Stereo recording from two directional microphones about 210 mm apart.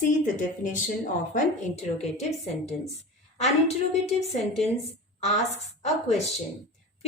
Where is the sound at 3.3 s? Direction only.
30° left (ahead or behind).